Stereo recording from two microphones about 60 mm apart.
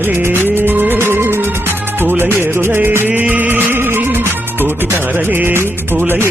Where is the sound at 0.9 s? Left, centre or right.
Right.